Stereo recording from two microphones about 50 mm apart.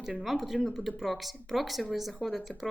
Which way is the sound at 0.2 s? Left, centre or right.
Centre.